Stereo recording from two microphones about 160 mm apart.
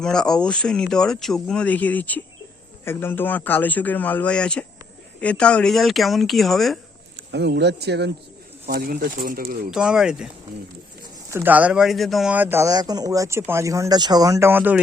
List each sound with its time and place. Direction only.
0.0 s a man's voice: 5° left (ahead or behind)
7.2 s speech: 90° right
8.6 s speech: 70° right (ahead or behind)
9.6 s speech: 5° right (ahead or behind)
11.3 s speech: 10° right (ahead or behind)